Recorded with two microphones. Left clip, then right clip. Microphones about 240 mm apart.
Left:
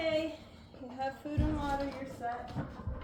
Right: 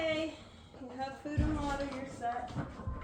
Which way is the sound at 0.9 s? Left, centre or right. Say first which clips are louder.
Left 2 dB; centre.